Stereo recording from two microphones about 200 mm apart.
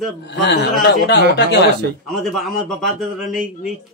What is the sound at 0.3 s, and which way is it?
Speech, 60° left (ahead or behind).